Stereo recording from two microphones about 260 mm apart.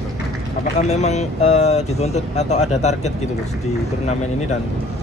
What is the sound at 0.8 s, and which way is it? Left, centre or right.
Speech, left.